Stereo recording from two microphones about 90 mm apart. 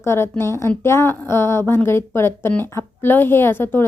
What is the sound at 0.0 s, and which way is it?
A woman's voice, 30° left (ahead or behind).